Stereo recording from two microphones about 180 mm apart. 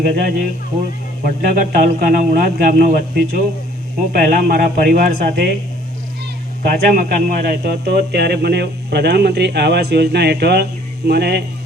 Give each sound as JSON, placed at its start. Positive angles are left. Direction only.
{"t": 0.0, "sound": "a man's voice", "side_deg": -60}
{"t": 6.6, "sound": "a man's voice", "side_deg": -50}